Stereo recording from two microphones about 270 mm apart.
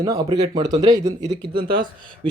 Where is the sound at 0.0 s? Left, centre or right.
Centre.